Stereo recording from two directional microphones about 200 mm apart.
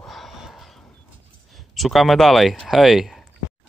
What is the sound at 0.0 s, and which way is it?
Horse, centre (ahead or behind).